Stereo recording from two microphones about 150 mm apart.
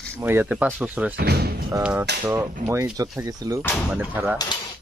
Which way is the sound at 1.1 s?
90° right.